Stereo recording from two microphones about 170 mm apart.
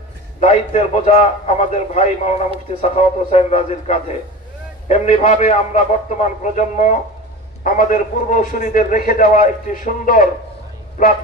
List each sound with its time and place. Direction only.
0.4 s a man's voice: 40° left (ahead or behind)